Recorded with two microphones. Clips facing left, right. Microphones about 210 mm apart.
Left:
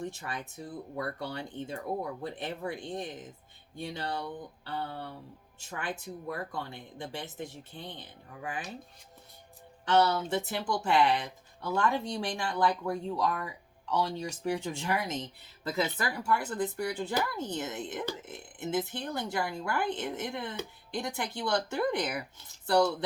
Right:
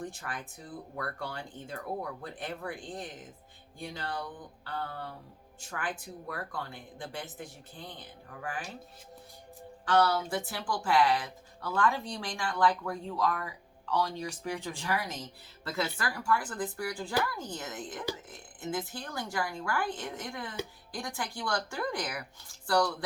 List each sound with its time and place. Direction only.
0.0 s speech: 25° left (ahead or behind)
9.8 s speech: 20° left (ahead or behind)